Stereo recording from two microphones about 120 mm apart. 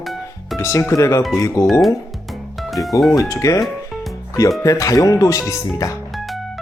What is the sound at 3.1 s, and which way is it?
Speech, 25° left (ahead or behind).